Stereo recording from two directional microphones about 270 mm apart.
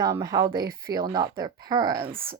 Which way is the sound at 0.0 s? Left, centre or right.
Centre.